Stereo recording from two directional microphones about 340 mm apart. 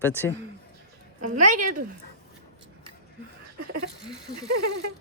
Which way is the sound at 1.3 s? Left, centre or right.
Right.